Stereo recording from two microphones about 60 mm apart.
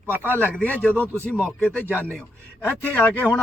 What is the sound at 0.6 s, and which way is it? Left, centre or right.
Speech, left.